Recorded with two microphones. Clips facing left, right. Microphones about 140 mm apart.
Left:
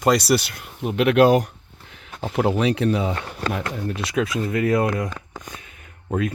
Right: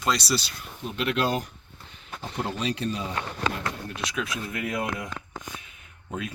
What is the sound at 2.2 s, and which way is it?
Speech, 90° left.